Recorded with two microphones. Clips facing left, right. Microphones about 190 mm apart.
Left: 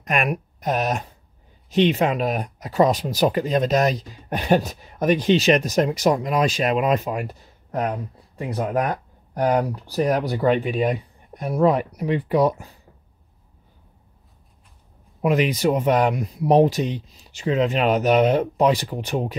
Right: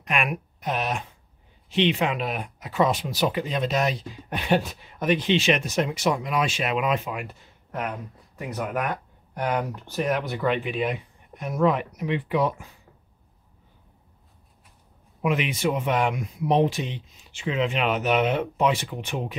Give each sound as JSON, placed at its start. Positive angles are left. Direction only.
{"t": 0.0, "sound": "speech", "side_deg": 40}
{"t": 15.2, "sound": "speech", "side_deg": 40}